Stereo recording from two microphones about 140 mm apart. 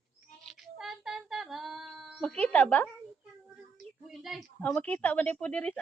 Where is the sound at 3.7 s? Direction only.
Centre (ahead or behind).